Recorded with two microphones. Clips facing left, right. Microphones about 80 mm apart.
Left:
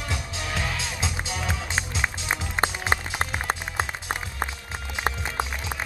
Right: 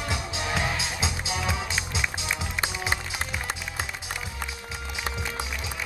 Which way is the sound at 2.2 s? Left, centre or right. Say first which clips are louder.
Left 4 dB; left.